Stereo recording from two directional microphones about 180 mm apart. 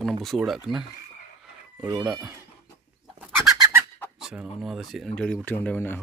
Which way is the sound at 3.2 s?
15° right (ahead or behind).